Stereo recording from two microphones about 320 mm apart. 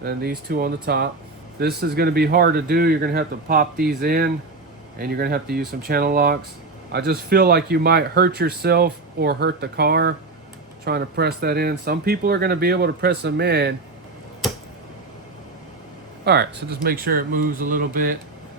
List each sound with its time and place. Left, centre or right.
0.0 s speech: right
16.2 s speech: right